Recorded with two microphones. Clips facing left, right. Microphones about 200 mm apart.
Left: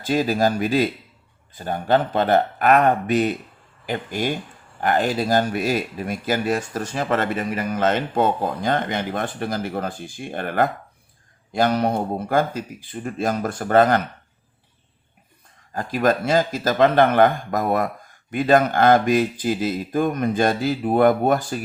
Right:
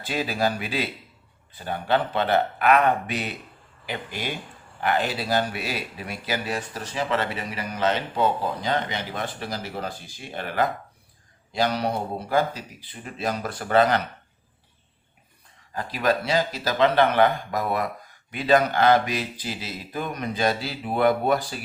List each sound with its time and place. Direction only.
0.0 s speech: 45° left (ahead or behind)
15.7 s speech: 50° left (ahead or behind)